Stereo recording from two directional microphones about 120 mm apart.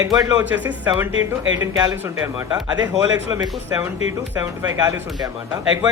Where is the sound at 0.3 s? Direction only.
15° right (ahead or behind); by 2.6 s 30° right (ahead or behind).